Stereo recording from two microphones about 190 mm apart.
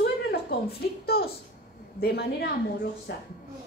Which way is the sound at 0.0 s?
60° left (ahead or behind).